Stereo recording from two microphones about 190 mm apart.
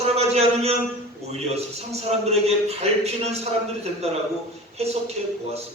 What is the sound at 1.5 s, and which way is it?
A man's voice, 35° right (ahead or behind).